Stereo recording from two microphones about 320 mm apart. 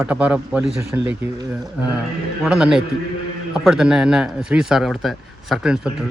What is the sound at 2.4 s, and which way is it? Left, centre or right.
A man's voice, centre.